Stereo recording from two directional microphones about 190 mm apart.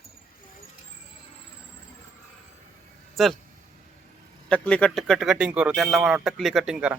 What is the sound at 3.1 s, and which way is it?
Speech, centre (ahead or behind).